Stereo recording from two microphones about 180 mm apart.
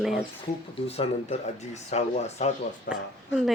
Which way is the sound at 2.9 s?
65° left (ahead or behind).